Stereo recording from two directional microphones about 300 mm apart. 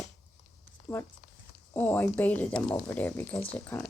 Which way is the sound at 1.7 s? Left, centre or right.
Centre.